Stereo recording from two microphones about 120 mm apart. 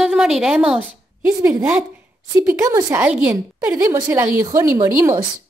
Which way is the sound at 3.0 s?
10° right (ahead or behind).